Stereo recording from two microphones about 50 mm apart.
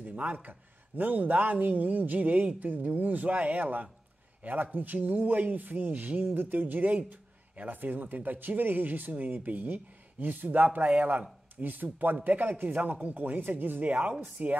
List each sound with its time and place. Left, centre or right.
0.0 s speech: right